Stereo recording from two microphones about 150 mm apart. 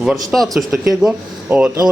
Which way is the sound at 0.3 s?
Centre (ahead or behind).